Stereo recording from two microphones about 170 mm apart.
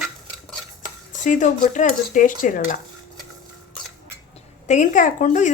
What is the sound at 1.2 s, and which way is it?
Speech, 45° left (ahead or behind).